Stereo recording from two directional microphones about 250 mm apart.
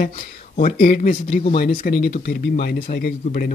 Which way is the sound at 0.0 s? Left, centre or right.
Left.